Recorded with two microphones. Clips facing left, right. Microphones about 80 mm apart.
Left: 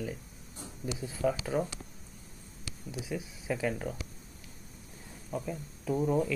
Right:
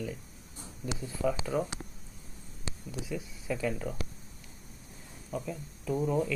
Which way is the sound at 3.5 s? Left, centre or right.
Left.